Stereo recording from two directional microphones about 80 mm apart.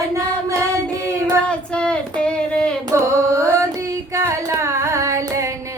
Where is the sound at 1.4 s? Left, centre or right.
Centre.